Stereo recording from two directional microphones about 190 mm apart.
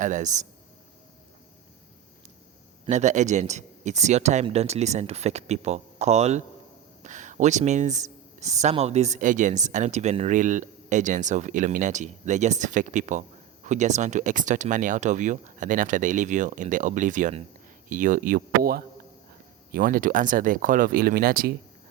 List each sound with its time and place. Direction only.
0.0 s speech: 40° right (ahead or behind)
2.8 s speech: 40° right (ahead or behind)